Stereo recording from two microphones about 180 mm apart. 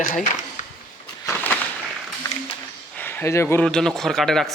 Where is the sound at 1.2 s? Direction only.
10° left (ahead or behind).